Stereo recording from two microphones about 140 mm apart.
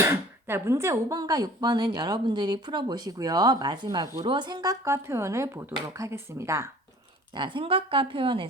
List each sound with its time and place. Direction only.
0.0 s speech: 15° right (ahead or behind)
7.3 s a woman's voice: 35° right (ahead or behind)